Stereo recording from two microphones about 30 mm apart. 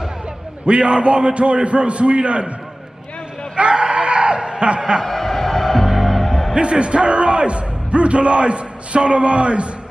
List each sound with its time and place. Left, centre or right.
0.7 s a man's voice: right
3.5 s a sound: right
5.0 s music: centre
6.5 s speech: right